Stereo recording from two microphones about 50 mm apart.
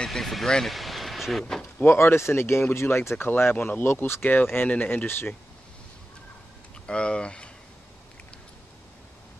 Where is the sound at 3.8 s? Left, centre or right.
Left.